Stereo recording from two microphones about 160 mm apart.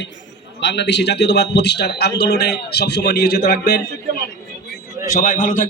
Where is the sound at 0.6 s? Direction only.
90° left.